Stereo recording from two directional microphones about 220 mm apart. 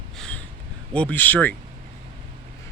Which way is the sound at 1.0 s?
5° left (ahead or behind).